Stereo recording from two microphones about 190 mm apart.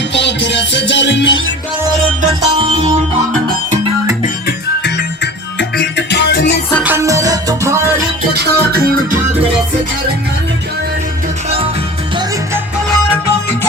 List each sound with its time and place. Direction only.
0.1 s music: 70° left (ahead or behind)
2.2 s music: 30° right (ahead or behind)
4.4 s music: 65° left (ahead or behind)
6.8 s music: 15° right (ahead or behind)
8.3 s music: 55° right (ahead or behind)